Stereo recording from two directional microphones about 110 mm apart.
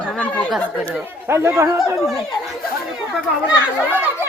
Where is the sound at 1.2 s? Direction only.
25° right (ahead or behind).